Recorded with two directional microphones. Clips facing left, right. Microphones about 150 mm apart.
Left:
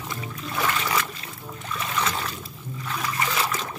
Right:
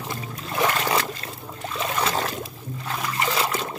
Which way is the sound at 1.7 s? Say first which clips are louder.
Right 2 dB; 30° right (ahead or behind).